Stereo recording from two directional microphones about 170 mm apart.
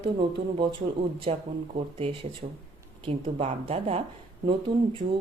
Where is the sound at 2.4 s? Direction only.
60° right (ahead or behind).